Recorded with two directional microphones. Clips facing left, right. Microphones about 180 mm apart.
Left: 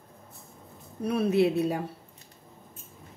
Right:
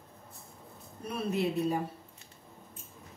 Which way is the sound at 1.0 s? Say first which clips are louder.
Left 8 dB; 75° left (ahead or behind).